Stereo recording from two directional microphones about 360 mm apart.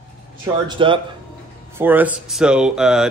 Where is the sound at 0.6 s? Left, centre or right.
Centre.